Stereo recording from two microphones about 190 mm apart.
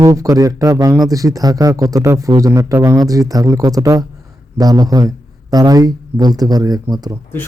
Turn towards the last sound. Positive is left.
turn(degrees=-20)  # may be behind; listen again after turning